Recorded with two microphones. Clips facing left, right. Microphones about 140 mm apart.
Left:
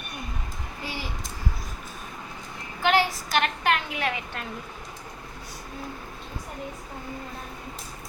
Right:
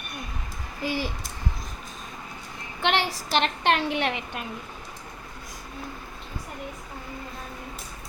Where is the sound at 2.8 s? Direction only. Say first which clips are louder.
Left 3 dB; 30° right (ahead or behind).